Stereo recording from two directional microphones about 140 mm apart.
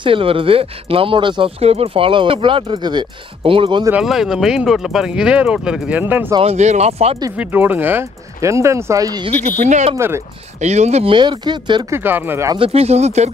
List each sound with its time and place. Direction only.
0.0 s speech: 40° right (ahead or behind)
3.9 s speech: centre (ahead or behind)
6.4 s speech: 55° right (ahead or behind)
7.3 s speech: 15° right (ahead or behind)
9.3 s speech: 60° right (ahead or behind)
9.9 s speech: 20° right (ahead or behind)
10.6 s speech: 55° right (ahead or behind)
11.1 s speech: 30° right (ahead or behind)
11.9 s speech: 15° right (ahead or behind)
12.5 s speech: 45° right (ahead or behind)